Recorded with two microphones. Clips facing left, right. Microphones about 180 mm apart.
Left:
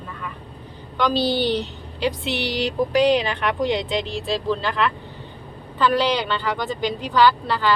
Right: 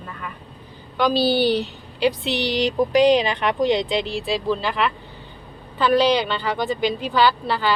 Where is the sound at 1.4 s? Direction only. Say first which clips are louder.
Right 2 dB; 20° left (ahead or behind).